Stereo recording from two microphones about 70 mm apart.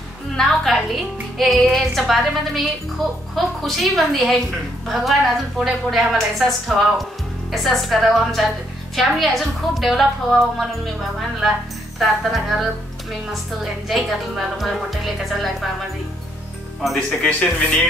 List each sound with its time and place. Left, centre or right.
0.4 s music: centre
1.4 s a woman's voice: centre
13.8 s a woman's voice: centre
16.8 s a woman's voice: centre
17.2 s speech: centre